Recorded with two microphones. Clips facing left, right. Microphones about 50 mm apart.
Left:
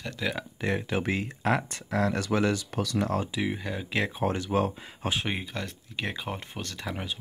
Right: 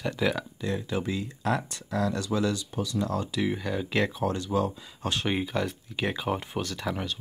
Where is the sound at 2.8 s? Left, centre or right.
Left.